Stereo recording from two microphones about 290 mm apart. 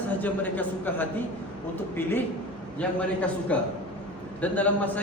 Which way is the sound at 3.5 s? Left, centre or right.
Centre.